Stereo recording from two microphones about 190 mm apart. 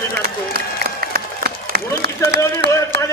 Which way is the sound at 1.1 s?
55° right (ahead or behind).